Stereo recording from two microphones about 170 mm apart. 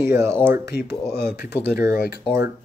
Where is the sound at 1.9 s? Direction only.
65° left (ahead or behind).